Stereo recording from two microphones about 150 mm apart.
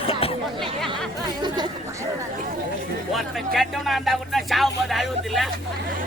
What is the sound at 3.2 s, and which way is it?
Music, centre (ahead or behind).